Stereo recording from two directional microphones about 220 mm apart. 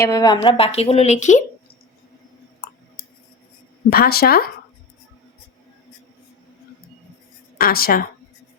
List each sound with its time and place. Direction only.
0.0 s speech: 15° left (ahead or behind); by 1.5 s 35° left (ahead or behind)
3.8 s a woman's voice: 45° left (ahead or behind)
7.6 s a woman's voice: 40° left (ahead or behind)